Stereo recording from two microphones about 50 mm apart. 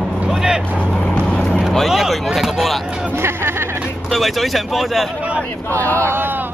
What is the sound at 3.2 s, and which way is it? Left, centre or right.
Speech, right.